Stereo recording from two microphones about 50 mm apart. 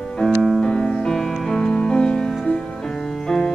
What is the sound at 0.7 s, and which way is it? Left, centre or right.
Music, centre.